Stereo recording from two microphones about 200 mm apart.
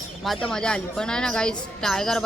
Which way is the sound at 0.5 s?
5° left (ahead or behind).